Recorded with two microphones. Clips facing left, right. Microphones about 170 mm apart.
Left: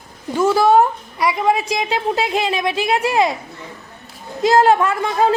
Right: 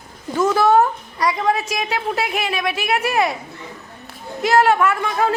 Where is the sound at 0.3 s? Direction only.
10° left (ahead or behind).